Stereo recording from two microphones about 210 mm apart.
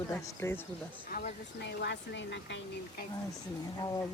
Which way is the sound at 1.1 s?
45° left (ahead or behind).